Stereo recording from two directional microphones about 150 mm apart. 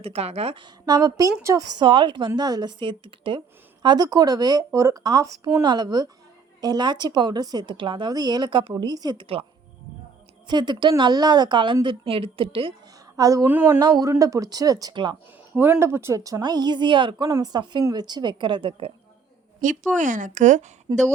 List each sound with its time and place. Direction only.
0.0 s speech: 45° right (ahead or behind); by 1.6 s 20° right (ahead or behind)
1.8 s a woman's voice: 35° right (ahead or behind)
13.1 s speech: 20° right (ahead or behind)
13.7 s speech: 25° right (ahead or behind)
15.5 s speech: 15° right (ahead or behind); by 18.9 s 35° right (ahead or behind)
20.0 s speech: 60° right (ahead or behind)
20.9 s speech: 30° right (ahead or behind)